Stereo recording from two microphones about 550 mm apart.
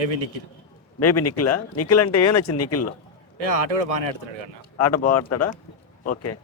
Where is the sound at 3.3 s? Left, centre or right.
Right.